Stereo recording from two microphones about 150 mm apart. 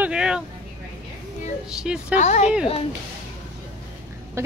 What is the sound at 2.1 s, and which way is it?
Speech, 50° left (ahead or behind).